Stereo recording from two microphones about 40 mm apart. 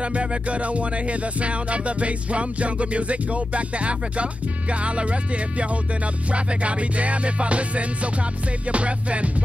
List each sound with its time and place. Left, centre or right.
0.0 s music: right